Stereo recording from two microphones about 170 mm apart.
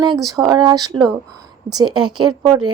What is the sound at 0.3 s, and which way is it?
A woman's voice, 25° right (ahead or behind).